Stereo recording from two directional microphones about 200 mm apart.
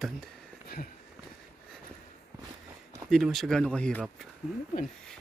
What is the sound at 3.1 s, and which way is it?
Speech, centre (ahead or behind).